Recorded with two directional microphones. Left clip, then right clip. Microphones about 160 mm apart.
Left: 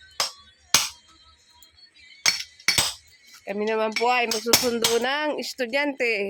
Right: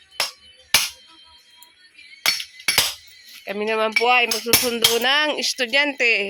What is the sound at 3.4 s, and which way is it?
Speech, 5° left (ahead or behind).